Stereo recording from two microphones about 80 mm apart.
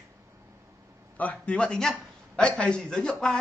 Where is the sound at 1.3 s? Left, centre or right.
Centre.